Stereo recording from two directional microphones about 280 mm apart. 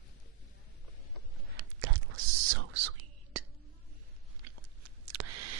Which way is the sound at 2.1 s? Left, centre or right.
Right.